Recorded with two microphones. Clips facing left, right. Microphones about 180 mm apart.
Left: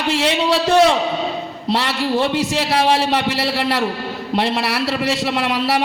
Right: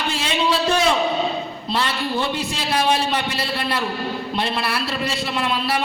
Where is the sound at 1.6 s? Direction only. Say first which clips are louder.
Left 5 dB; 75° left (ahead or behind).